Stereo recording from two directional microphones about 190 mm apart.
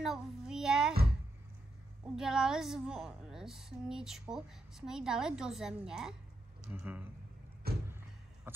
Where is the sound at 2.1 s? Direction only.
5° right (ahead or behind).